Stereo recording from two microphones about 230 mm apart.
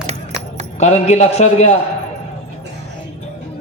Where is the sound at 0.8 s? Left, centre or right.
Left.